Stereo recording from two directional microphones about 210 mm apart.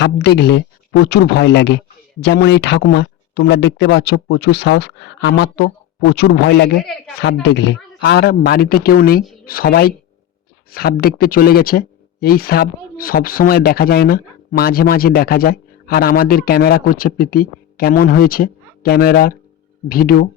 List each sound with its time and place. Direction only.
0.0 s speech: 55° left (ahead or behind)
6.9 s speech: centre (ahead or behind)
7.5 s speech: 55° left (ahead or behind)